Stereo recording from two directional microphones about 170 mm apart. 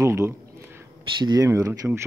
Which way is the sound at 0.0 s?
15° right (ahead or behind).